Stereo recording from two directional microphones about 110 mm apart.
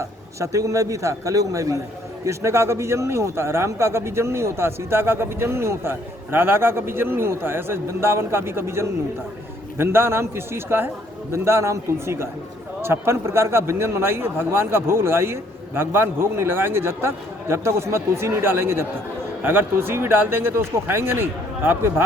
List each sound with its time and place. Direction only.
0.3 s a man's voice: 30° right (ahead or behind)